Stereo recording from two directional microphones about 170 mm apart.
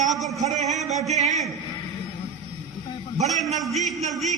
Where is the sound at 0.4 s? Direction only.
45° right (ahead or behind).